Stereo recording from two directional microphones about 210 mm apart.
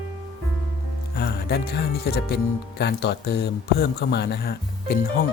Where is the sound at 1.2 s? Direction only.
50° left (ahead or behind).